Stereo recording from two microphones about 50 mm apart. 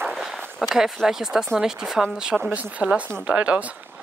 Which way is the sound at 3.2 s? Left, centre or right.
Right.